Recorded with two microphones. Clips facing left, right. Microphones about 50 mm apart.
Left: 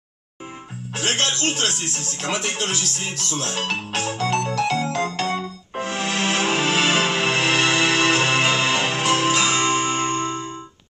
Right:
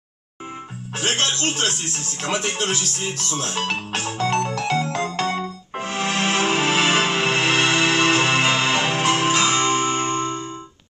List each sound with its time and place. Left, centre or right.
0.9 s speech: centre
4.3 s music: centre
9.0 s music: centre
9.5 s music: centre